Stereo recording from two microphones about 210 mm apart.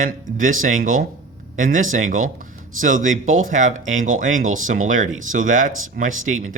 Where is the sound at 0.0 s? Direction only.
40° right (ahead or behind).